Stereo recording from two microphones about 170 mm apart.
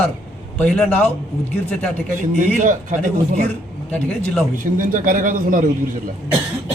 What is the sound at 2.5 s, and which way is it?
Speech, 50° right (ahead or behind).